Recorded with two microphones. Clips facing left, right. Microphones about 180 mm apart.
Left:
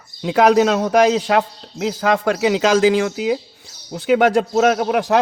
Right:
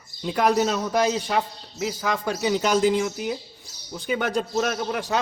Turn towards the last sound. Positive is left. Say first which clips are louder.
# left 10 dB
turn(degrees=70)  # may be behind; listen again after turning